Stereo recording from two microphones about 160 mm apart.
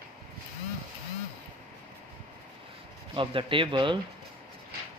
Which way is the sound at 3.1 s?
30° right (ahead or behind).